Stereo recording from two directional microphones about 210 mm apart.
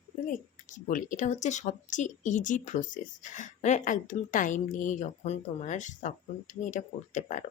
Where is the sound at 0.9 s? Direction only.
40° left (ahead or behind).